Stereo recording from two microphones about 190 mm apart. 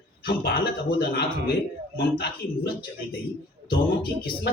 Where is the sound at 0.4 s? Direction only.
55° left (ahead or behind).